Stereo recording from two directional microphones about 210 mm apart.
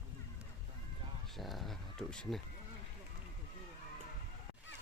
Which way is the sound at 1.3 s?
Centre (ahead or behind).